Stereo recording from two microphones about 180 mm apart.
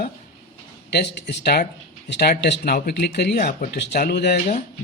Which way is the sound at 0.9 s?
70° left (ahead or behind).